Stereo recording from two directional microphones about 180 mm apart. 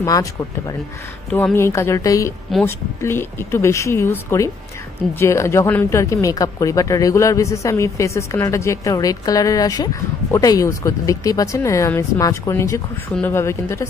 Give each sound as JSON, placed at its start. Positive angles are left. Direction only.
{"t": 0.0, "sound": "speech", "side_deg": 20}